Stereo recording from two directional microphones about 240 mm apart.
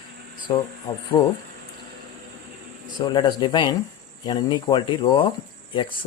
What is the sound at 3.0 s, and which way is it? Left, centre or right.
Speech, centre.